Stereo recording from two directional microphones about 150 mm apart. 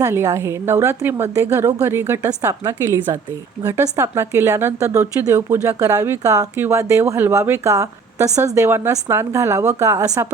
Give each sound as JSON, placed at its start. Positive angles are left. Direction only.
{"t": 0.0, "sound": "a woman's voice", "side_deg": -20}